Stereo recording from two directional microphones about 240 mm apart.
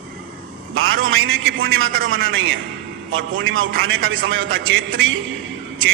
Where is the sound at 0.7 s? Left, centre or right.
Right.